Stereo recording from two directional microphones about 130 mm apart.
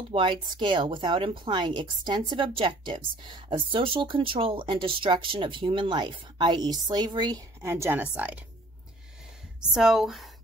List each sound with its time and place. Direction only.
0.1 s speech: 40° right (ahead or behind)
7.6 s a woman's voice: 20° right (ahead or behind)
9.6 s speech: 5° right (ahead or behind)